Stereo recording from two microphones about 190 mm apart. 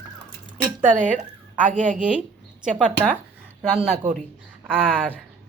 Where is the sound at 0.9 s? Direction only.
40° right (ahead or behind).